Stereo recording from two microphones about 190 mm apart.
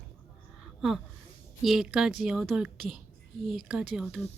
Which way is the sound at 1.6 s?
Centre (ahead or behind).